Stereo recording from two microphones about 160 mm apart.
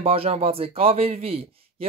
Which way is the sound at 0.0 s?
35° right (ahead or behind).